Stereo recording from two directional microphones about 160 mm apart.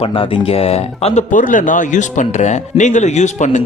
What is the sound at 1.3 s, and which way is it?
Speech, 55° left (ahead or behind).